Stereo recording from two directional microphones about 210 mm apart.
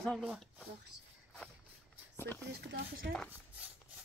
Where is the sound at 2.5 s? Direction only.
50° right (ahead or behind).